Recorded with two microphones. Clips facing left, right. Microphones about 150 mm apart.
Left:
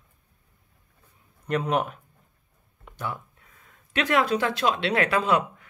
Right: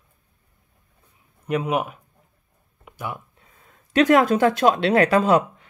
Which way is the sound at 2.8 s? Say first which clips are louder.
Right 1 dB; 10° right (ahead or behind).